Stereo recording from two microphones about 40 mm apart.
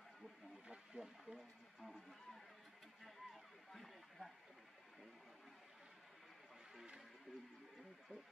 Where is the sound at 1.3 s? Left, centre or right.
Centre.